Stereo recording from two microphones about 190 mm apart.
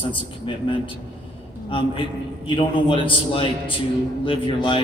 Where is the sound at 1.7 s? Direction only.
25° left (ahead or behind).